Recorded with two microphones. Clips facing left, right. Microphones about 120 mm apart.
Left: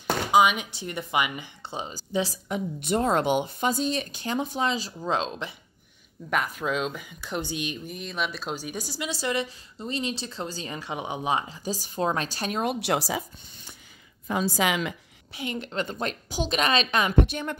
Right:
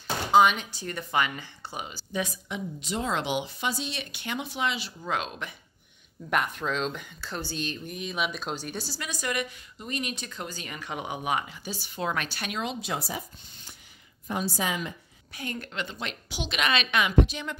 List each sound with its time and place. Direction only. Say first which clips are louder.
0.3 s speech: right 1 dB; 10° left (ahead or behind); by 2.0 s 25° left (ahead or behind)
2.4 s speech: left 5 dB; 50° left (ahead or behind)
5.0 s speech: left 3 dB; 25° left (ahead or behind)
6.3 s speech: left 1 dB; centre (ahead or behind)
7.9 s speech: even; 5° right (ahead or behind); by 12.6 s 35° left (ahead or behind)
12.6 s speech: left 9 dB; 70° left (ahead or behind)
14.5 s a woman's voice: left 5 dB; 90° left
15.3 s speech: left 3 dB; 20° left (ahead or behind)
15.7 s a woman's voice: left 5 dB; 40° left (ahead or behind)
17.2 s speech: left 1 dB; 55° left (ahead or behind)